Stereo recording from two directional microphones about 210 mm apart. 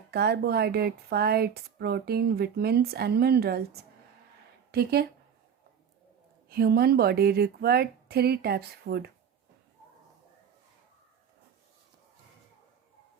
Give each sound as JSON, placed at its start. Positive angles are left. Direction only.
{"t": 0.1, "sound": "speech", "side_deg": -50}
{"t": 4.7, "sound": "speech", "side_deg": -50}
{"t": 6.5, "sound": "speech", "side_deg": -45}